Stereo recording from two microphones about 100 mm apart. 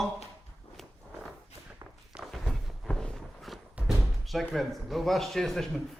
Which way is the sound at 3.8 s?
15° right (ahead or behind).